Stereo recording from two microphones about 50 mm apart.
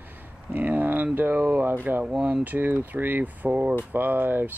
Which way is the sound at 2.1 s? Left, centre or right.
Right.